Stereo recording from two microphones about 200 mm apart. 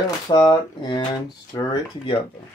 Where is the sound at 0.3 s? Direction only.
20° left (ahead or behind).